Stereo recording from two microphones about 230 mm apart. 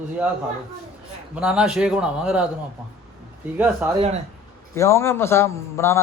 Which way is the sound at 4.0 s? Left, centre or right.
Right.